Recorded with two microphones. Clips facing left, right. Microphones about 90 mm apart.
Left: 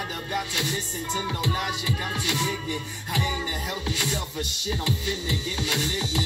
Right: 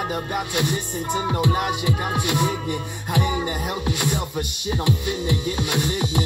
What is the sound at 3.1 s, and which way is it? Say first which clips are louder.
Music: right 6 dB; 15° right (ahead or behind).